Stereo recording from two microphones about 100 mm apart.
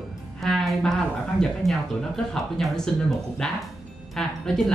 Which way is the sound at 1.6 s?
35° right (ahead or behind).